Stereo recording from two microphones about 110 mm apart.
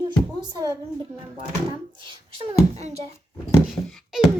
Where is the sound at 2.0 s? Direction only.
50° right (ahead or behind).